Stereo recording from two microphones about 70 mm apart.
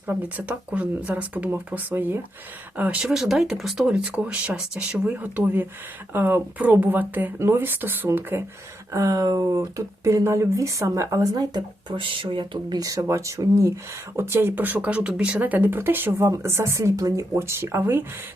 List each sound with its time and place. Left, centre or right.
0.1 s speech: right
3.0 s speech: centre
5.1 s speech: right
7.3 s speech: right
8.9 s speech: right
9.6 s speech: right
14.2 s speech: right
16.2 s speech: right